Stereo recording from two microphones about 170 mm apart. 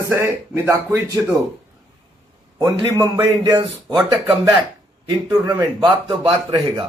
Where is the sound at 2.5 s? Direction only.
20° right (ahead or behind).